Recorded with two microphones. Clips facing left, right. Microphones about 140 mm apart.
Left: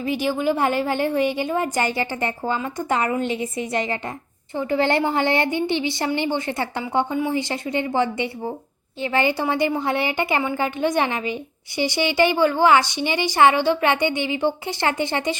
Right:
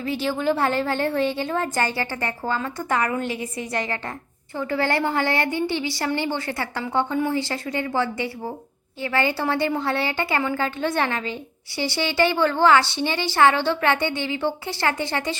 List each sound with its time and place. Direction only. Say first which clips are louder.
0.0 s a woman's voice: left 2 dB; 15° left (ahead or behind)